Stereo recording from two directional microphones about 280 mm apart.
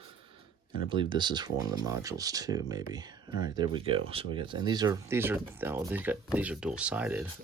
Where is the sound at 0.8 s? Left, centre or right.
Centre.